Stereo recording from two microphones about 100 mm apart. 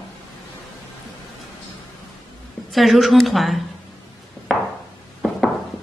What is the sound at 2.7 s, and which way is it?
Speech, centre (ahead or behind).